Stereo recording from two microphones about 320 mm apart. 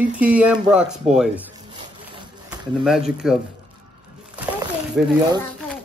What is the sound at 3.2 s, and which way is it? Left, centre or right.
Speech, centre.